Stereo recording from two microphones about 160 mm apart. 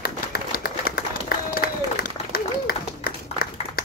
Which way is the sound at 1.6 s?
70° left (ahead or behind).